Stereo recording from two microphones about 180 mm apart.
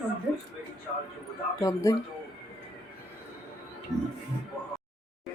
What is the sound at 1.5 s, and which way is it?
Speech, 20° left (ahead or behind).